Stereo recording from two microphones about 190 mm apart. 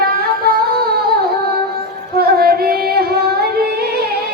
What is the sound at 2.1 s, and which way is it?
Music, 55° right (ahead or behind).